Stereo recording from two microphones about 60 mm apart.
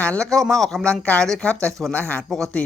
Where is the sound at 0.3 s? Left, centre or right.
Centre.